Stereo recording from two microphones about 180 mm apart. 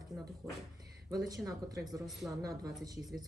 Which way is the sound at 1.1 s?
20° right (ahead or behind).